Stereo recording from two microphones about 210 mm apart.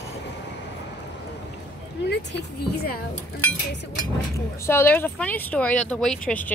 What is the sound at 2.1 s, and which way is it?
Speech, 55° left (ahead or behind).